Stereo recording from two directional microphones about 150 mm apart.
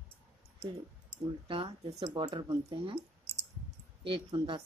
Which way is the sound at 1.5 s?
35° right (ahead or behind).